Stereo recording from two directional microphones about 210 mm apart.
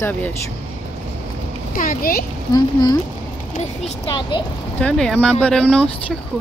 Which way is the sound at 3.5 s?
30° left (ahead or behind).